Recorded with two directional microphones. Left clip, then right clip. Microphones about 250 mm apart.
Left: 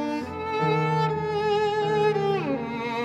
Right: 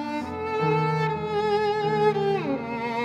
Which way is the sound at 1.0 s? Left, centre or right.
Centre.